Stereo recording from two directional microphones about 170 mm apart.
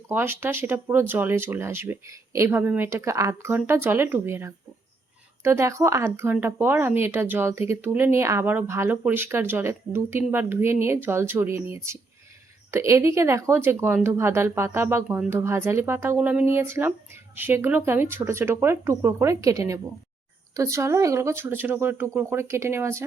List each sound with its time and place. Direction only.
0.1 s speech: 15° right (ahead or behind)